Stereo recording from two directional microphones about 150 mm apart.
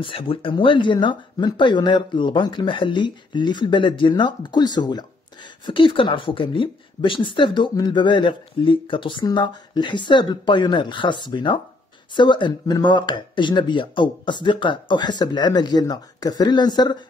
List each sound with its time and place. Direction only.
0.0 s a woman's voice: 35° left (ahead or behind)